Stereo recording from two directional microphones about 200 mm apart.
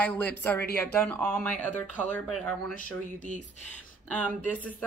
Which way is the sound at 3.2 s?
40° left (ahead or behind).